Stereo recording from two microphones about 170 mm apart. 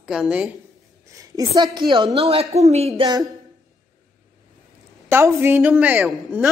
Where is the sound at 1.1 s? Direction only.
20° right (ahead or behind); by 3.0 s 40° right (ahead or behind).